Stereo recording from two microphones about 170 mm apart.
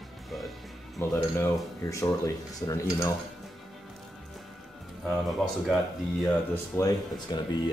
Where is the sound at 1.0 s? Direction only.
10° left (ahead or behind).